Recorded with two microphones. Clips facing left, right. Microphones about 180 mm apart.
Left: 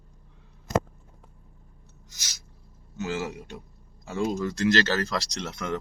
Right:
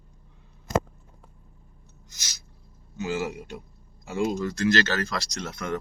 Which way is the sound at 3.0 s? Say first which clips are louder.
Right 2 dB; centre (ahead or behind).